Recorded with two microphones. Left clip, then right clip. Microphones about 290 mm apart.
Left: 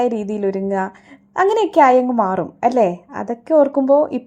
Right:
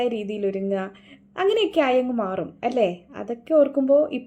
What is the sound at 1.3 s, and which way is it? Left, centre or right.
A woman's voice, left.